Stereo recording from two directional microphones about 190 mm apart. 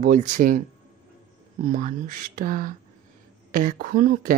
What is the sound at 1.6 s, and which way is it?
A woman's voice, 45° right (ahead or behind).